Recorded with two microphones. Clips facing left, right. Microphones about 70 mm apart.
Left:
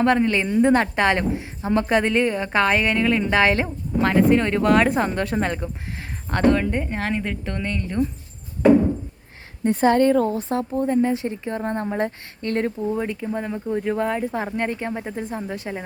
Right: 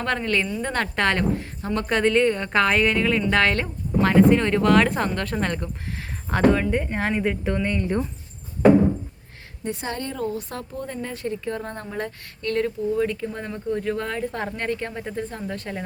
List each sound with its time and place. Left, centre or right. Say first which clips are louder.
0.0 s a woman's voice: left 5 dB; centre
9.6 s a woman's voice: left 13 dB; left
10.3 s speech: left 8 dB; left
13.1 s a woman's voice: left 3 dB; centre